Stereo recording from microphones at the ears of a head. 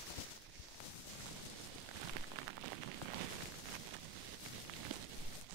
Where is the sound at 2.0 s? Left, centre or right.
Right.